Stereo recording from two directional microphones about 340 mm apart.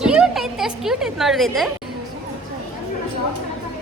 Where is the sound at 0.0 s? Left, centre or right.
Centre.